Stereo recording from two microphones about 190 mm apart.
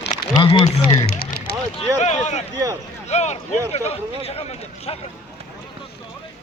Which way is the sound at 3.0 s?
35° left (ahead or behind).